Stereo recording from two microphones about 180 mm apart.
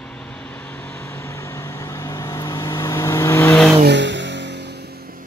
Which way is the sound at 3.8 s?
80° right.